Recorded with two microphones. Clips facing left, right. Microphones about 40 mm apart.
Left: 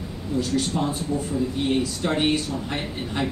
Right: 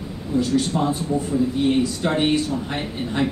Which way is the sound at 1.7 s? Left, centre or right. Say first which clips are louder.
Right 3 dB; centre.